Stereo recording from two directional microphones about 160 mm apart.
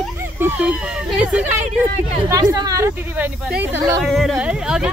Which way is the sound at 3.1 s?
10° right (ahead or behind).